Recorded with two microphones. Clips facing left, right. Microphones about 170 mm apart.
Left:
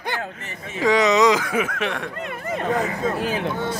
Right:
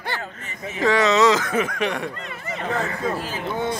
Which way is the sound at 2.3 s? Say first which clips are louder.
Left 4 dB; 50° left (ahead or behind).